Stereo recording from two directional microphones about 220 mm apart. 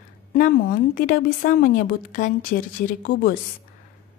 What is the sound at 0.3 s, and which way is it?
Speech, 40° left (ahead or behind).